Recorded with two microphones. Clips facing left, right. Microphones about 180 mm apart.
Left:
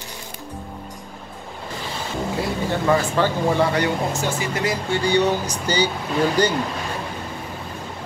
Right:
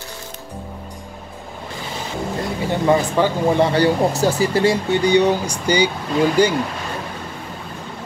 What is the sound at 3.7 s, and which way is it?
Speech, 35° right (ahead or behind).